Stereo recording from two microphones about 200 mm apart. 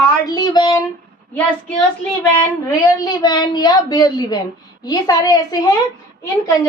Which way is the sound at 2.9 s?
20° left (ahead or behind).